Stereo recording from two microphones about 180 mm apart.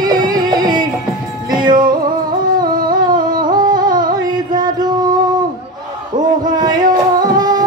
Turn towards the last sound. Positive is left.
turn(degrees=-20)  # may be behind; listen again after turning